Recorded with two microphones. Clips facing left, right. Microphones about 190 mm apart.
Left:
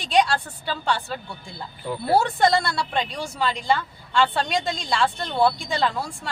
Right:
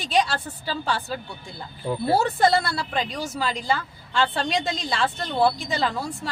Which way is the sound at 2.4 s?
5° right (ahead or behind).